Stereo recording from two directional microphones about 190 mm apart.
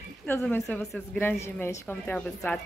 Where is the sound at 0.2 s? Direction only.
5° left (ahead or behind).